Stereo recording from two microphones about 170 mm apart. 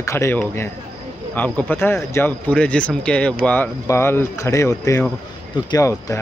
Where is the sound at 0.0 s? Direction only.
15° left (ahead or behind).